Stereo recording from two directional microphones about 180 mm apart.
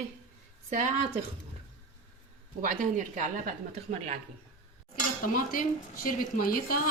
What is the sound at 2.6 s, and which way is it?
Speech, 45° right (ahead or behind).